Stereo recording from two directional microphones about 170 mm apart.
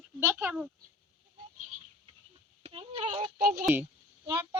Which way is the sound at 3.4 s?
55° right (ahead or behind).